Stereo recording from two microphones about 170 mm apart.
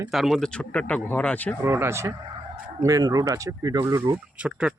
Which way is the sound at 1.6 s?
15° right (ahead or behind).